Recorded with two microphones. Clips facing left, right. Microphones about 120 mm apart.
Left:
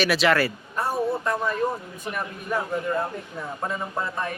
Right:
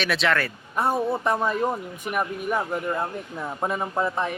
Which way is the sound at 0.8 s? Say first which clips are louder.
Right 2 dB; 20° right (ahead or behind).